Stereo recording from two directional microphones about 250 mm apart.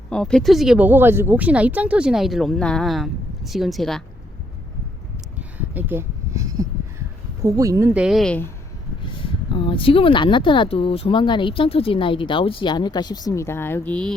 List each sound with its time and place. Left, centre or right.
0.1 s speech: centre
5.5 s a sound: centre
7.4 s speech: centre
9.5 s speech: left; by 14.2 s centre